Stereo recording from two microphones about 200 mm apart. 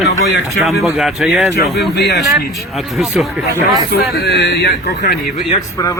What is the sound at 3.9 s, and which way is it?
A man's voice, 50° left (ahead or behind).